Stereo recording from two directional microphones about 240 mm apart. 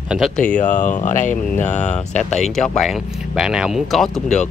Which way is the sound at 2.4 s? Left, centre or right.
Centre.